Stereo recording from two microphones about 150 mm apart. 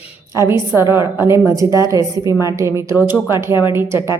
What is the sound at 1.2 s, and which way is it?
A woman's voice, 15° right (ahead or behind).